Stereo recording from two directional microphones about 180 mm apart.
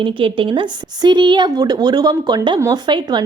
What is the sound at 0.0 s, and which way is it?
A woman's voice, 30° right (ahead or behind).